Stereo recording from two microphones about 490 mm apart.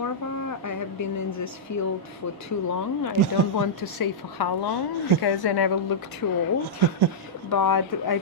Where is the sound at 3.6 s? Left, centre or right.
Left.